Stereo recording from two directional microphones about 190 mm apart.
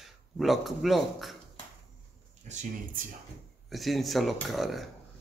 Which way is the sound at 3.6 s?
Centre (ahead or behind).